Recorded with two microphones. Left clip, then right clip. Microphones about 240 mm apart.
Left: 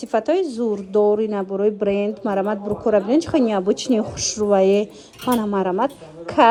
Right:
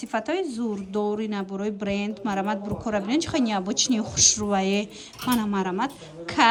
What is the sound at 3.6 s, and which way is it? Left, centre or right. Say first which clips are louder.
Speech: left 6 dB; centre.